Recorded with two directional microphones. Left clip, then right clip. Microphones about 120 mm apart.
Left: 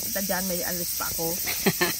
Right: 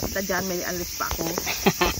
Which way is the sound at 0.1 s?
40° left (ahead or behind).